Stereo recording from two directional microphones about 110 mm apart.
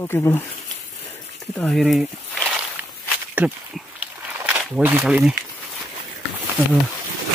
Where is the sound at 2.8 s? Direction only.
15° right (ahead or behind).